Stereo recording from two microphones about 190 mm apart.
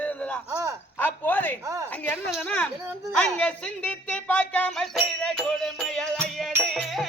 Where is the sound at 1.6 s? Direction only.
15° right (ahead or behind).